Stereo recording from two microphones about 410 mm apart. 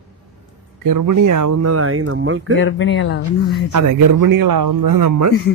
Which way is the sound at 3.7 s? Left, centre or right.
Right.